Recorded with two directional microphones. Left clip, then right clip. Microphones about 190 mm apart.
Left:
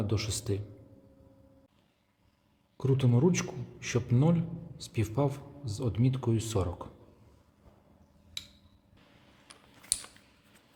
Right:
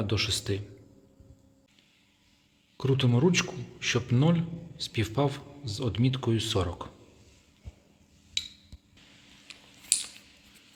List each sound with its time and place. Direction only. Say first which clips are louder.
0.0 s a man's voice: right 6 dB; centre (ahead or behind)
2.7 s a man's voice: right 2 dB; centre (ahead or behind)
8.4 s a sound: right 9 dB; 15° left (ahead or behind)
9.5 s typing: right 6 dB; 15° left (ahead or behind)